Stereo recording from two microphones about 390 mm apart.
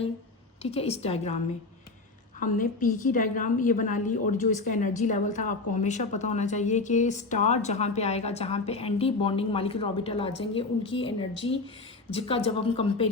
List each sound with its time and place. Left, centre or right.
0.6 s a woman's voice: centre
2.4 s a woman's voice: left